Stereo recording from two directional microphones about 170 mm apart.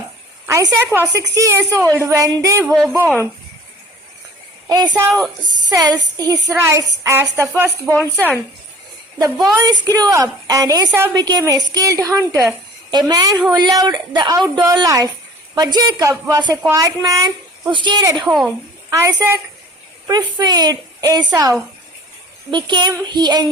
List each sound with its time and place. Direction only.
0.4 s a woman's voice: 20° right (ahead or behind)
4.7 s a woman's voice: 25° right (ahead or behind)
9.1 s speech: 20° right (ahead or behind)
18.3 s speech: centre (ahead or behind)
18.9 s a woman's voice: 15° right (ahead or behind)
22.5 s speech: 25° right (ahead or behind)